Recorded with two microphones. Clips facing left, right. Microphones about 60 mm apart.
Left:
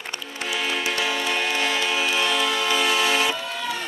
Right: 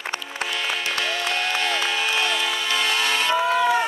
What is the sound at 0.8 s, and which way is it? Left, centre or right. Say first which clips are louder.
Music: left 1 dB; centre.